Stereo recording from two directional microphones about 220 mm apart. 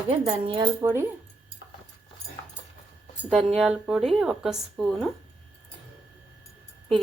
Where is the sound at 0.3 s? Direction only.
20° right (ahead or behind).